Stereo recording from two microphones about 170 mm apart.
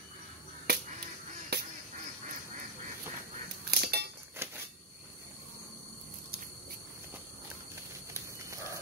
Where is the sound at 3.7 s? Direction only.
70° right (ahead or behind).